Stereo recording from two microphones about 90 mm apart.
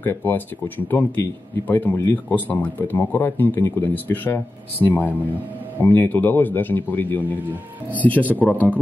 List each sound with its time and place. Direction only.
0.0 s speech: 20° left (ahead or behind)